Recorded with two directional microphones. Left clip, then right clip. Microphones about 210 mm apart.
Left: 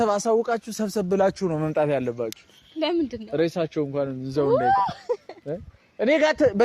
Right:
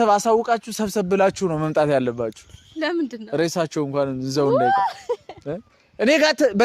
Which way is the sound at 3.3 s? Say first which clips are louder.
Right 2 dB; 45° right (ahead or behind).